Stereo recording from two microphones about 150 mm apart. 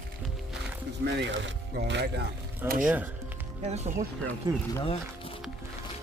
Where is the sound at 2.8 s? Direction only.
10° right (ahead or behind).